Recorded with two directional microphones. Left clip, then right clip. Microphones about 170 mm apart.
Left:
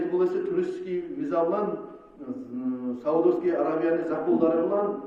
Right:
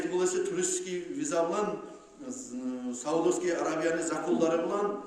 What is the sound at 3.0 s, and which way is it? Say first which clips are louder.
A man's voice: left 5 dB; 20° right (ahead or behind).